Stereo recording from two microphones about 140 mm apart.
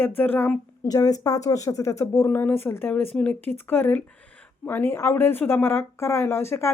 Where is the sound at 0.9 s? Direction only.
25° left (ahead or behind).